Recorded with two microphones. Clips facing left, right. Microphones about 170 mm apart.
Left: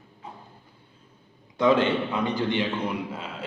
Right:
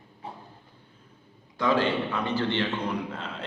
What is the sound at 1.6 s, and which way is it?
A man's voice, 20° left (ahead or behind).